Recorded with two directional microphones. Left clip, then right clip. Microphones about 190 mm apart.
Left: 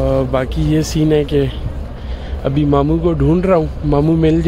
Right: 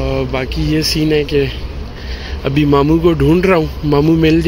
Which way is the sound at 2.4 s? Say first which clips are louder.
Right 2 dB; 10° left (ahead or behind).